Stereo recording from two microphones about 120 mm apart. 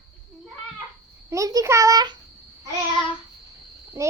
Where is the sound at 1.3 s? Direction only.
30° right (ahead or behind).